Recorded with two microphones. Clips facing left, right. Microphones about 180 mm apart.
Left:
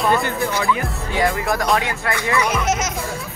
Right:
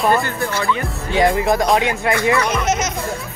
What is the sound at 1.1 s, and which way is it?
Music, 20° right (ahead or behind).